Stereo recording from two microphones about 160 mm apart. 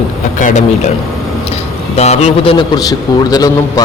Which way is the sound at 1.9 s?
40° left (ahead or behind).